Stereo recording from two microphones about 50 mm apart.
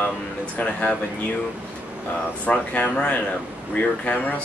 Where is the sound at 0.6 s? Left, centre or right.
Left.